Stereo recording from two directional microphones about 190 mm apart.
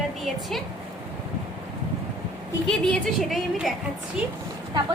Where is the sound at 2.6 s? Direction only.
Centre (ahead or behind).